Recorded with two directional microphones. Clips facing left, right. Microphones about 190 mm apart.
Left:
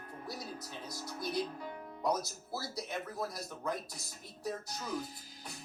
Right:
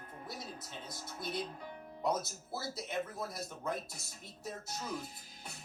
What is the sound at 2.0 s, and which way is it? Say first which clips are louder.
Speech: left 1 dB; 25° right (ahead or behind).